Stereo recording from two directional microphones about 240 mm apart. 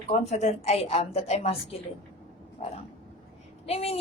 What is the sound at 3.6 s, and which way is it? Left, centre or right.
Speech, left.